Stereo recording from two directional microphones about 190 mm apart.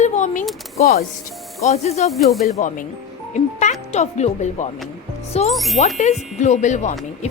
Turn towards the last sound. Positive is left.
turn(degrees=40)  # may be behind; listen again after turning